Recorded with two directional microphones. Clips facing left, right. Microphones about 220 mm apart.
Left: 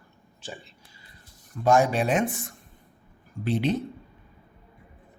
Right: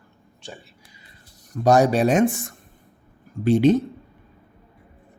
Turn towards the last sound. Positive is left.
turn(degrees=-45)  # may be behind; listen again after turning